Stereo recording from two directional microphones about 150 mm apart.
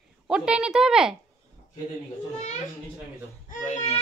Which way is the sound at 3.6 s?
50° left (ahead or behind).